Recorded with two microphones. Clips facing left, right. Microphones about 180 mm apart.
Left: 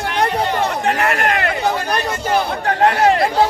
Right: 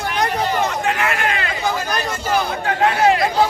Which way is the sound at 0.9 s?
40° left (ahead or behind).